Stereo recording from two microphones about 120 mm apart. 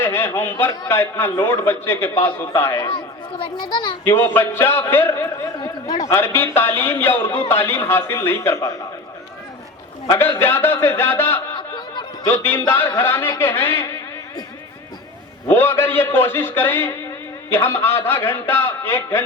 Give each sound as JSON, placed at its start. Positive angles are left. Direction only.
{"t": 0.0, "sound": "a man's voice", "side_deg": 20}
{"t": 2.8, "sound": "a child's voice", "side_deg": 45}
{"t": 4.0, "sound": "a man's voice", "side_deg": 20}
{"t": 6.1, "sound": "a man's voice", "side_deg": 20}
{"t": 10.2, "sound": "a man's voice", "side_deg": 20}
{"t": 15.4, "sound": "a man's voice", "side_deg": 20}